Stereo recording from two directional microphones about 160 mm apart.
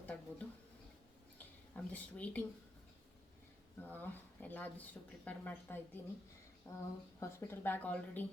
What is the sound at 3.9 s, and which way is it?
Speech, 10° left (ahead or behind).